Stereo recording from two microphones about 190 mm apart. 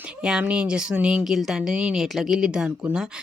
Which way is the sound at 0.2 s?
5° right (ahead or behind).